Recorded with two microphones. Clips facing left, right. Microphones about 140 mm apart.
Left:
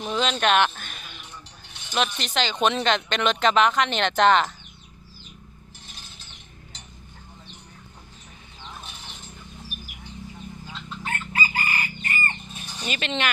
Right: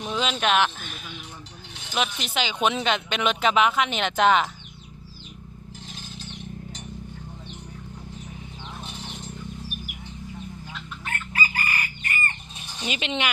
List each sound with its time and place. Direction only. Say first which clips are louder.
0.0 s a sound: left 2 dB; centre (ahead or behind)
2.0 s speech: left 2 dB; 5° right (ahead or behind)
10.7 s chicken: left 5 dB; 30° left (ahead or behind)
12.8 s speech: even; 15° right (ahead or behind)